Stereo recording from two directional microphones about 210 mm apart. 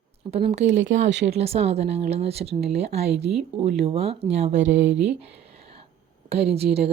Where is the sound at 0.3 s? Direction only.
30° right (ahead or behind).